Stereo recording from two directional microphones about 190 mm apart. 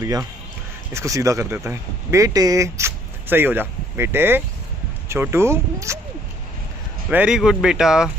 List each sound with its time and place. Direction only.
0.0 s speech: 20° right (ahead or behind)
7.1 s speech: 5° right (ahead or behind)